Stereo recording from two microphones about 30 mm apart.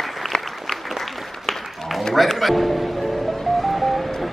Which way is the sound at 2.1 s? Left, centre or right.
Centre.